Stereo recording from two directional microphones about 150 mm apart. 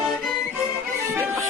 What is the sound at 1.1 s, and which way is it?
Music, 15° right (ahead or behind).